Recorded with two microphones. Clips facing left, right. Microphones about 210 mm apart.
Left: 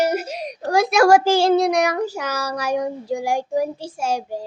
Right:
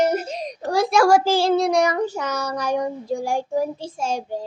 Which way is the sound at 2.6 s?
10° left (ahead or behind).